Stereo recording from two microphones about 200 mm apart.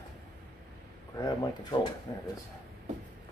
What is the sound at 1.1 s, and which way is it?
Speech, 20° left (ahead or behind).